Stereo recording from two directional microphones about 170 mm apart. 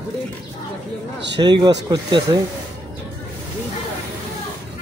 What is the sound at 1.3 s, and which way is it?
Speech, 25° right (ahead or behind).